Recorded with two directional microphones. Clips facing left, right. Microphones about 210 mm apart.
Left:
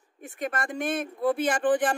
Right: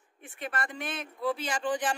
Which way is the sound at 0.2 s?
45° left (ahead or behind).